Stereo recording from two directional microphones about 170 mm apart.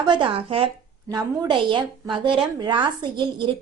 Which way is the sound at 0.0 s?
25° right (ahead or behind).